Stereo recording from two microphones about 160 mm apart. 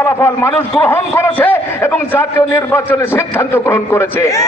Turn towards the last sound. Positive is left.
turn(degrees=15)  # may be behind; listen again after turning